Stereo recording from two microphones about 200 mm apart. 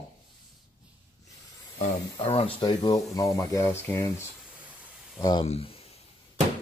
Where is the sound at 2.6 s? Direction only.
20° left (ahead or behind).